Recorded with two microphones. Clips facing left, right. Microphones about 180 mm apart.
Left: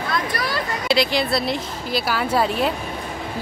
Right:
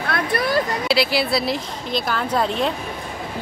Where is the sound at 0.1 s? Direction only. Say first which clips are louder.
Right 5 dB; 55° right (ahead or behind).